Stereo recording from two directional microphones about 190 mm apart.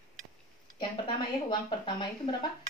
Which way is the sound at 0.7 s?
25° left (ahead or behind).